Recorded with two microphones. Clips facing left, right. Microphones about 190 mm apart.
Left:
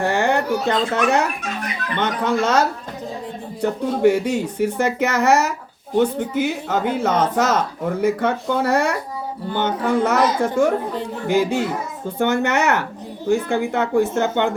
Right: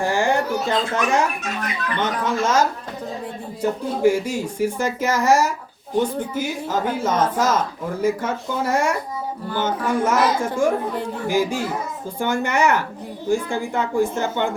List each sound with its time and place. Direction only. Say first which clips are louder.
0.0 s speech: left 1 dB; 60° left (ahead or behind)